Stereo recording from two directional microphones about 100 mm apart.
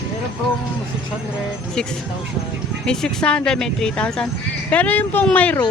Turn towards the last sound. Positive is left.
turn(degrees=15)  # may be behind; listen again after turning